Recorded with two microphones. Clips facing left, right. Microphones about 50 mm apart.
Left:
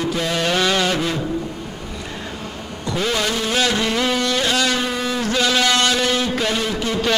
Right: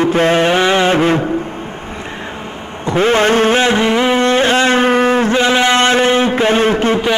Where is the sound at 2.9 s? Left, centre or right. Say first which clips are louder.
Right 10 dB; right.